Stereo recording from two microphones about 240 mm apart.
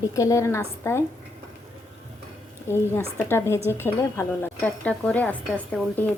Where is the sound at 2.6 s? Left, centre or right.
Centre.